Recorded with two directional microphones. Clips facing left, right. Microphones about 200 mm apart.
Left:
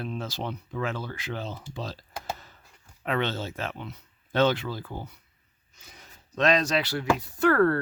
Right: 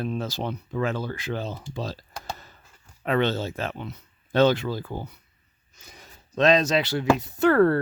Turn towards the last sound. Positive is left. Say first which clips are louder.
# right 3 dB
turn(degrees=-25)  # may be behind; listen again after turning